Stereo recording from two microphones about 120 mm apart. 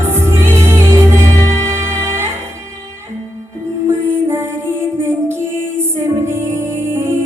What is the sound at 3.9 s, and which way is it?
Music, 20° right (ahead or behind).